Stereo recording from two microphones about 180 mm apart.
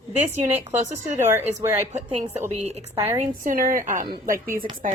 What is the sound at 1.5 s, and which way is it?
Speech, 40° right (ahead or behind).